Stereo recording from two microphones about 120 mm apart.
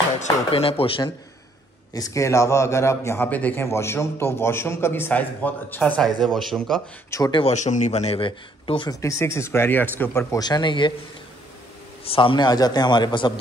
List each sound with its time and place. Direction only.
0.5 s speech: 55° left (ahead or behind)
2.0 s a man's voice: 25° left (ahead or behind); by 6.8 s centre (ahead or behind)
7.1 s a man's voice: 30° left (ahead or behind)
7.5 s speech: 85° left; by 8.3 s 60° left (ahead or behind)
8.3 s speech: 40° left (ahead or behind)
9.0 s a man's voice: 25° left (ahead or behind)
10.4 s a man's voice: 40° left (ahead or behind)
12.1 s a man's voice: 45° left (ahead or behind)